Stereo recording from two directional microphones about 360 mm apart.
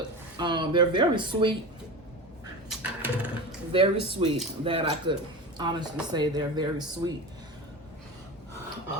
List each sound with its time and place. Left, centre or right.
0.3 s speech: centre
2.6 s a sound: centre
3.7 s speech: centre